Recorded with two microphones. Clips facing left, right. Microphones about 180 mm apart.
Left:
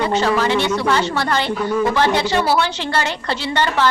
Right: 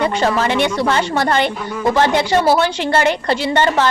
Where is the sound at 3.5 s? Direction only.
45° right (ahead or behind).